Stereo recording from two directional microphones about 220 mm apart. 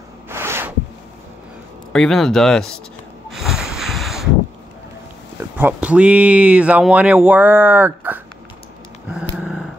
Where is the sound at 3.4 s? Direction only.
Centre (ahead or behind).